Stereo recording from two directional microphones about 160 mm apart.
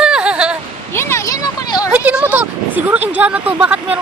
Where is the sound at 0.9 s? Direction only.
15° left (ahead or behind).